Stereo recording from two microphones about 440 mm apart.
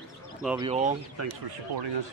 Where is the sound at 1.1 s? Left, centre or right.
Right.